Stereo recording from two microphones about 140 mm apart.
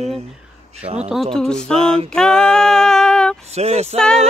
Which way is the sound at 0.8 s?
50° right (ahead or behind).